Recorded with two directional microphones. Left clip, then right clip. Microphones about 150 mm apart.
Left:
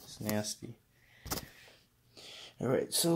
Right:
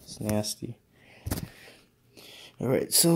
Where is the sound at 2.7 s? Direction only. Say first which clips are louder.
Right 6 dB; 45° right (ahead or behind).